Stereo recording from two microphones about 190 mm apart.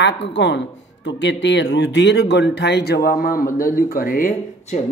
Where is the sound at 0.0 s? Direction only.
70° left (ahead or behind).